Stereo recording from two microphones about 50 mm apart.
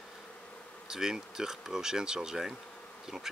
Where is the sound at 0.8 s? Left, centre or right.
Centre.